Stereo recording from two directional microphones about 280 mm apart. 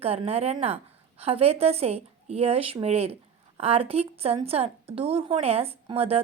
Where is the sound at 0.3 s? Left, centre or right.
Right.